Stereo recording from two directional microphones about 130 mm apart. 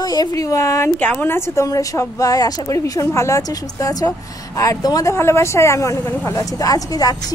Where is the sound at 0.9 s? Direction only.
10° left (ahead or behind).